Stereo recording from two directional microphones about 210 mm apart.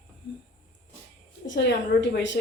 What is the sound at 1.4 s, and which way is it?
Speech, 55° left (ahead or behind).